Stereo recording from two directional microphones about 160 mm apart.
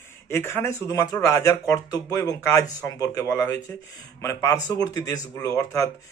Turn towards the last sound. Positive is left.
turn(degrees=20)  # may be behind; listen again after turning